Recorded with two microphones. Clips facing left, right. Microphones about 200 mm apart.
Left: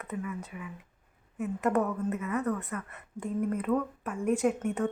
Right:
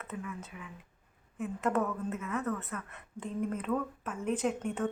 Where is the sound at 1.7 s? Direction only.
15° left (ahead or behind).